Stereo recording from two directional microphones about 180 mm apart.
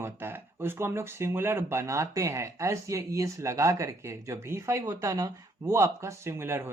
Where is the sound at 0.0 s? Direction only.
10° right (ahead or behind).